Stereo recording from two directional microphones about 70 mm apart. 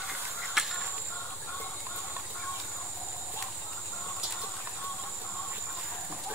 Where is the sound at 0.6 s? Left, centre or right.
Centre.